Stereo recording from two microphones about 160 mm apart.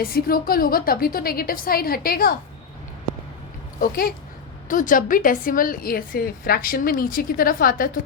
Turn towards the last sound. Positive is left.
turn(degrees=65)  # may be behind; listen again after turning